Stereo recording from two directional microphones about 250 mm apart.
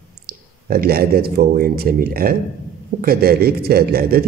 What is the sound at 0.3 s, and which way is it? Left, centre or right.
Speech, right.